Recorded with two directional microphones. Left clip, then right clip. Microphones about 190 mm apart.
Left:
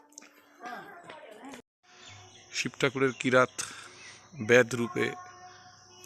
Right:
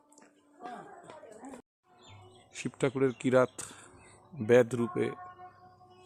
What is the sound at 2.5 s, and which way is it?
Speech, 5° right (ahead or behind).